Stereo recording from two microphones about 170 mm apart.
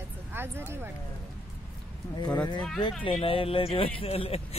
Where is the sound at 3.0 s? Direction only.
30° left (ahead or behind).